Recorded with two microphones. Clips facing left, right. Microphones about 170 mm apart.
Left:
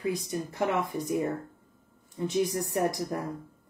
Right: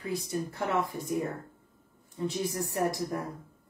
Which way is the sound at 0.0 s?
20° left (ahead or behind).